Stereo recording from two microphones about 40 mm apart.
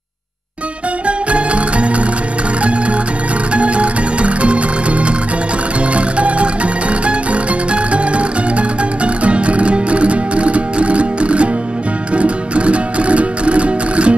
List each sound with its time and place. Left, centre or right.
1.0 s music: right
3.5 s music: right